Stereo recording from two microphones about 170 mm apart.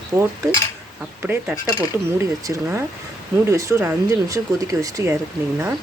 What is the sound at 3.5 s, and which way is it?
Speech, 20° right (ahead or behind).